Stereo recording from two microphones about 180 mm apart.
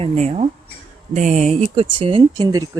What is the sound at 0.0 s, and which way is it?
Speech, 35° right (ahead or behind).